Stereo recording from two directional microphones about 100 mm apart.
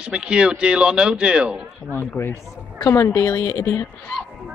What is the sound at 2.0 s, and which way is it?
A woman's voice, 25° left (ahead or behind).